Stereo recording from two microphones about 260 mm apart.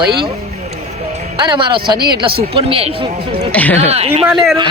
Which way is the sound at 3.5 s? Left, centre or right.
Centre.